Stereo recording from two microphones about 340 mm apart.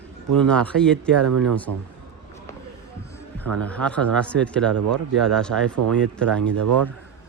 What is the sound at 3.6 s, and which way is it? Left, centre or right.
Speech, centre.